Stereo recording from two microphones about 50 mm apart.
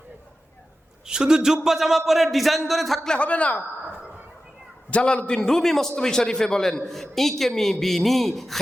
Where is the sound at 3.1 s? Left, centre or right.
Left.